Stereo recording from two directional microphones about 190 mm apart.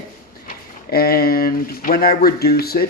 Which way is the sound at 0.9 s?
55° left (ahead or behind).